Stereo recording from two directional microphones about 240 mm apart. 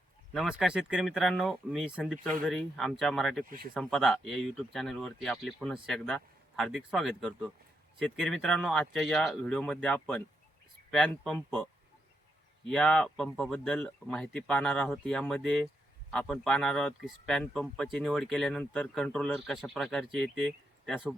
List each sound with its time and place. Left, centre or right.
0.3 s speech: centre
3.4 s speech: right
3.8 s speech: centre
12.6 s speech: centre